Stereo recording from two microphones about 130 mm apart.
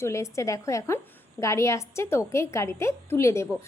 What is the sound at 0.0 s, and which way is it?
A woman's voice, 20° left (ahead or behind).